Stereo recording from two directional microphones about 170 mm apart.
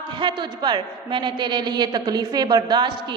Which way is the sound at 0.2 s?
25° right (ahead or behind).